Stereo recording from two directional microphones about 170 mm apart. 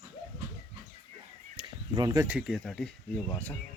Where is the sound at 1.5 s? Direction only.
25° right (ahead or behind).